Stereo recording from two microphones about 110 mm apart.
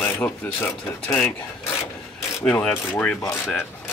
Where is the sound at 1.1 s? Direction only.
10° left (ahead or behind).